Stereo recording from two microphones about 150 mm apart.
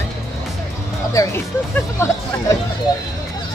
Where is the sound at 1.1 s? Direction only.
20° left (ahead or behind).